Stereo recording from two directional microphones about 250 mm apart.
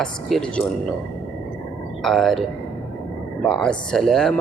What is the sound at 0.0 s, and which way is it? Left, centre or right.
Speech, centre.